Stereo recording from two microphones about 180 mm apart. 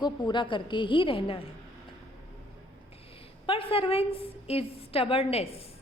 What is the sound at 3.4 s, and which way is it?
A woman's voice, 30° left (ahead or behind).